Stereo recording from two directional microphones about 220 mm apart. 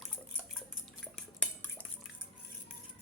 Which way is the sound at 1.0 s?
5° left (ahead or behind).